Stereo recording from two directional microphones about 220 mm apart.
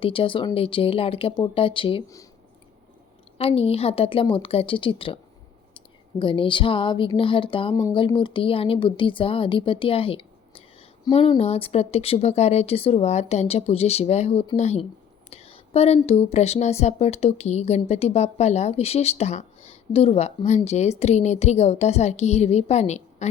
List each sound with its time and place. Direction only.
0.0 s speech: 25° left (ahead or behind)
3.3 s speech: 25° left (ahead or behind)